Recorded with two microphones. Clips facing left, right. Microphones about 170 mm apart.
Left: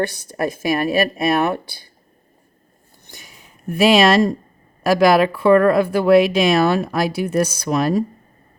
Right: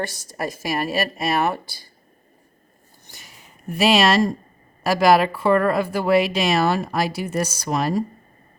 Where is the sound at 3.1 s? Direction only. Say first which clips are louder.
Left 3 dB; 50° left (ahead or behind).